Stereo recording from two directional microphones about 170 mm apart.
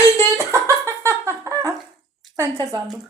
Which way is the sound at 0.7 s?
15° right (ahead or behind).